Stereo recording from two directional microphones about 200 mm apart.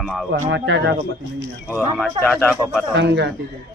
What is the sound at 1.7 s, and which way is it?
Speech, 10° left (ahead or behind).